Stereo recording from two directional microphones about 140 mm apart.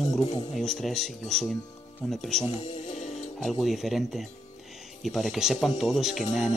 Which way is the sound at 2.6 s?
55° left (ahead or behind).